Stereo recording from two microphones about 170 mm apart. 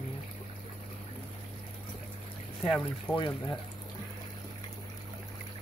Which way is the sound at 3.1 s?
25° left (ahead or behind).